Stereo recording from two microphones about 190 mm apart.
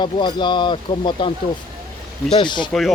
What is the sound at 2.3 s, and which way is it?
Speech, 25° left (ahead or behind).